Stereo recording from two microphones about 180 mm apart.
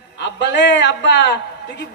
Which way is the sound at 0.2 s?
75° left (ahead or behind).